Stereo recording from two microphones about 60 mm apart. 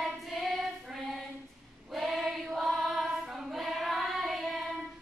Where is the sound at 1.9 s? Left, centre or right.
Centre.